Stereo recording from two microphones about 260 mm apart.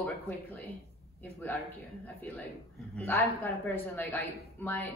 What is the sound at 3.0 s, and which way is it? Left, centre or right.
A woman's voice, centre.